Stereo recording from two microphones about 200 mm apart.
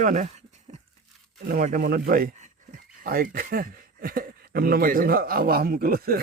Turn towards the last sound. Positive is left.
turn(degrees=-50)  # may be behind; listen again after turning